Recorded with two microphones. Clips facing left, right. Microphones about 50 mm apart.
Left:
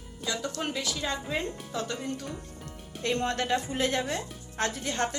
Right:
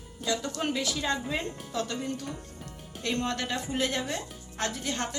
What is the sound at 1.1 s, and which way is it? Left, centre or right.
Speech, centre.